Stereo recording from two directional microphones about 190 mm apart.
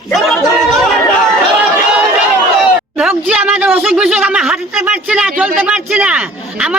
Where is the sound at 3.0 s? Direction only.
5° right (ahead or behind).